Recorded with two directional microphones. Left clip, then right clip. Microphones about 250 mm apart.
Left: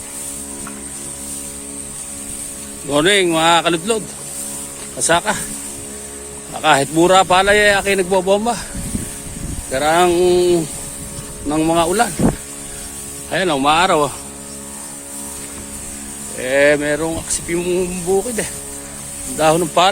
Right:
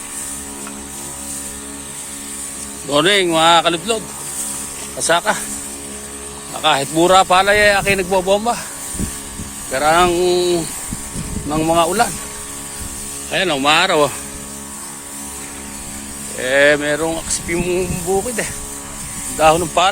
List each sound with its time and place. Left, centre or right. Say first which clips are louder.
2.9 s speech: even; left
6.6 s speech: left 1 dB; left
9.7 s a sound: even; left
13.3 s speech: even; left
13.7 s speech: right 1 dB; centre
16.4 s speech: right 1 dB; centre
19.4 s speech: right 1 dB; left